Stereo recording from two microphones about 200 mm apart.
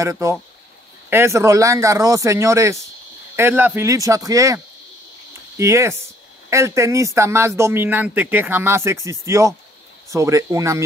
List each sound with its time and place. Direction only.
0.0 s speech: 15° right (ahead or behind)
5.6 s speech: 15° right (ahead or behind)